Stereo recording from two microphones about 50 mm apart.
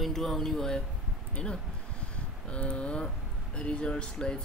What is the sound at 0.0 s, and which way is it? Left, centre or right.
Speech, centre.